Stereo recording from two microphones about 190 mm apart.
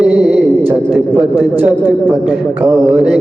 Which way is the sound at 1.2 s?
10° right (ahead or behind).